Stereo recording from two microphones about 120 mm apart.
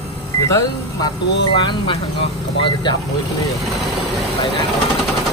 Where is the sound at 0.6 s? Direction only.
40° left (ahead or behind).